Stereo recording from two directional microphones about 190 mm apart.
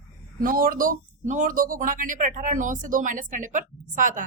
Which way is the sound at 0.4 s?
45° right (ahead or behind).